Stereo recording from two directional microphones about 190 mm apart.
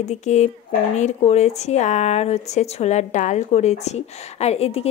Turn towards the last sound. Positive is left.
turn(degrees=30)  # may be behind; listen again after turning